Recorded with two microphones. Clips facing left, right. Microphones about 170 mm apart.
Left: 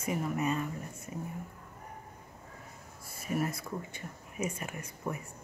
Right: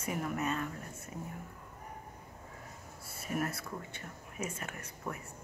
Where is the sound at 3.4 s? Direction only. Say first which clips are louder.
Left 2 dB; 10° left (ahead or behind).